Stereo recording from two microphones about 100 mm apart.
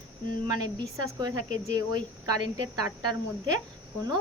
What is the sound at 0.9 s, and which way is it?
Speech, 40° right (ahead or behind).